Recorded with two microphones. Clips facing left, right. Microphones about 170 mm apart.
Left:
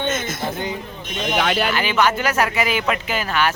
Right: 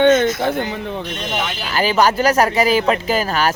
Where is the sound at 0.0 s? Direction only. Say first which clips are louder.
Right 12 dB; 60° right (ahead or behind).